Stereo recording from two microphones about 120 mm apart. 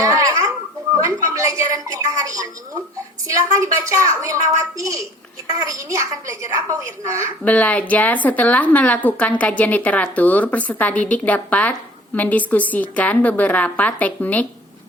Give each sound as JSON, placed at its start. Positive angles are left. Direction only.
{"t": 0.0, "sound": "babbling", "side_deg": -30}
{"t": 1.3, "sound": "a woman's voice", "side_deg": -30}
{"t": 7.4, "sound": "a woman's voice", "side_deg": 10}